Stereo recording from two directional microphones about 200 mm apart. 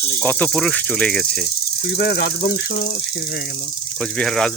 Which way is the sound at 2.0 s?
55° left (ahead or behind).